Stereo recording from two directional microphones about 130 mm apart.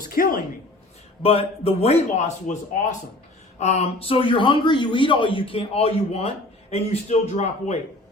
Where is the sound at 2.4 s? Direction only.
75° left (ahead or behind).